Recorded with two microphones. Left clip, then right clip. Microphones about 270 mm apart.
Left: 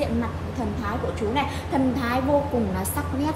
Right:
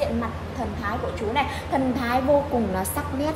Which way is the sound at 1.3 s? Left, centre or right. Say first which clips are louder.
Right 3 dB; right.